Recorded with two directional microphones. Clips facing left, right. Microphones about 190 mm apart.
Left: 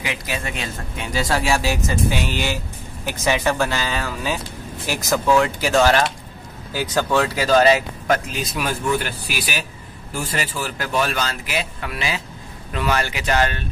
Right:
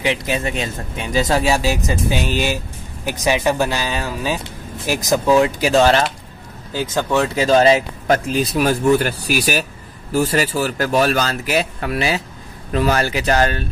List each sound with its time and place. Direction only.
0.0 s speech: 25° right (ahead or behind)